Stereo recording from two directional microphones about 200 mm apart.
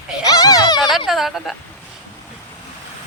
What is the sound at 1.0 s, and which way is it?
Speech, centre (ahead or behind).